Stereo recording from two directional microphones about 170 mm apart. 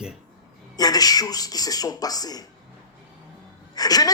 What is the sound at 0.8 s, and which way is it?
A woman's voice, 20° left (ahead or behind).